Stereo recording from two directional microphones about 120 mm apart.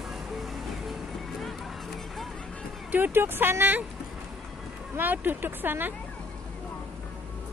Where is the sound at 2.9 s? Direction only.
15° right (ahead or behind).